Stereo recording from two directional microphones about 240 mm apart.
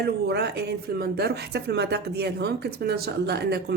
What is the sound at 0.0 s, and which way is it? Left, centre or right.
Speech, right.